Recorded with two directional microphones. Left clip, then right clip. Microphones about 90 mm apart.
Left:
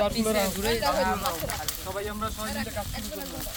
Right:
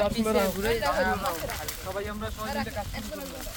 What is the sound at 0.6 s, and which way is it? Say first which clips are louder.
Speech: even; 20° right (ahead or behind).